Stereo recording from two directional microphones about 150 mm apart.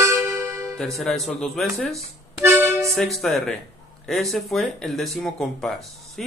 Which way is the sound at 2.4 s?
15° right (ahead or behind).